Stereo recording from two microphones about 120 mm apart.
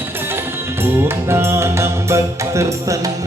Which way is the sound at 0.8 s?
20° right (ahead or behind).